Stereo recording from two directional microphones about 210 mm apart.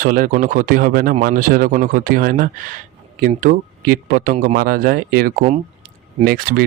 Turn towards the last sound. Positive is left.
turn(degrees=-40)  # may be behind; listen again after turning